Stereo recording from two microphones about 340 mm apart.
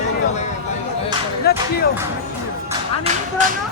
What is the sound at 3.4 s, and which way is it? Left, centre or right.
Speech, right.